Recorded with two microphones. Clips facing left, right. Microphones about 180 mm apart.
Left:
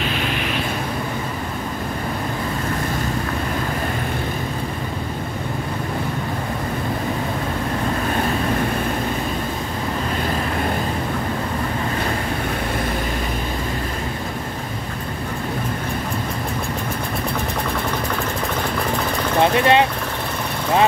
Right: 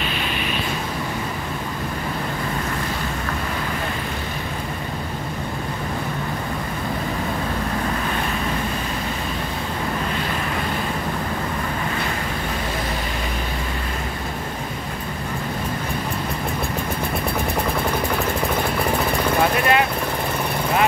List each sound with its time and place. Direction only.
19.4 s vehicle: 25° left (ahead or behind)